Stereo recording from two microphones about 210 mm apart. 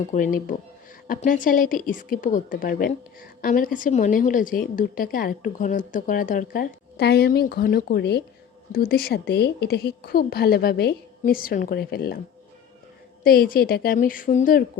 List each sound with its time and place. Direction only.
0.1 s a woman's voice: 40° left (ahead or behind)
13.2 s a woman's voice: 45° left (ahead or behind)